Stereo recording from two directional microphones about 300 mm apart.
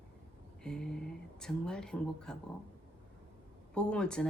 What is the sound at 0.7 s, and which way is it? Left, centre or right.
Speech, centre.